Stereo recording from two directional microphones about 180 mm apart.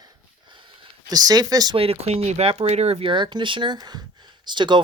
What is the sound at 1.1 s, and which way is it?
Speech, 20° right (ahead or behind).